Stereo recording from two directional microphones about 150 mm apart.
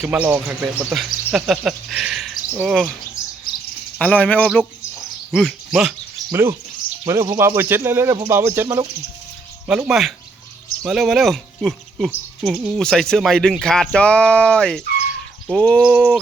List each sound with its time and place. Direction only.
0.0 s speech: 10° right (ahead or behind)
3.9 s cricket: 10° left (ahead or behind)
4.9 s bird: centre (ahead or behind)
6.3 s speech: 15° right (ahead or behind)
9.6 s speech: 5° right (ahead or behind)